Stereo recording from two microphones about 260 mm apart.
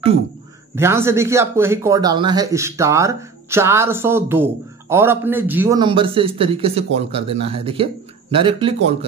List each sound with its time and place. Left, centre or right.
0.7 s speech: centre